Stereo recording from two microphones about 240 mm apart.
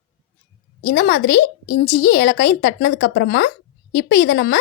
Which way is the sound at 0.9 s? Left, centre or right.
Left.